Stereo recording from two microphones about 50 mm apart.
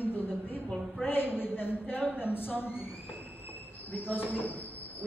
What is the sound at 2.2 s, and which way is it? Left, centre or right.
A man's voice, left.